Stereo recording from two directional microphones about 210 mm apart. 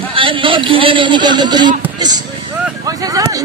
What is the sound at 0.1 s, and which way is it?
A man's voice, 25° right (ahead or behind).